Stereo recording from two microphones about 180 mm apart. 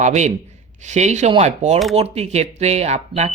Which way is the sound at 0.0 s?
40° right (ahead or behind).